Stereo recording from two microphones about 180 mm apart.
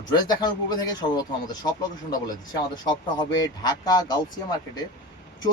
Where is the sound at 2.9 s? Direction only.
20° left (ahead or behind).